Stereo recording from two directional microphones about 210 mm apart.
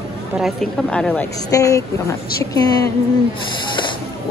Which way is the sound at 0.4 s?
Centre (ahead or behind).